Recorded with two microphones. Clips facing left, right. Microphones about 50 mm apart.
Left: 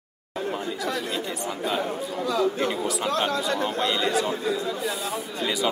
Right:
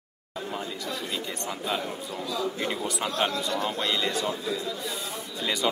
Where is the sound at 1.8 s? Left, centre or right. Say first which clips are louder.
Left 5 dB; left.